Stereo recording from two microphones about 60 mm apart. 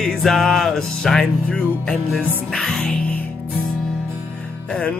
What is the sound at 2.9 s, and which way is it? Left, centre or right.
Music, left.